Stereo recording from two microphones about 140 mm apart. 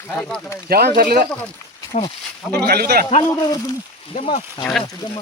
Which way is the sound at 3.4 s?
25° left (ahead or behind).